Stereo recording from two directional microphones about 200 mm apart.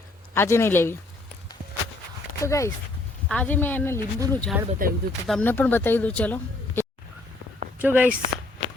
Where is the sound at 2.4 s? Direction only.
15° left (ahead or behind).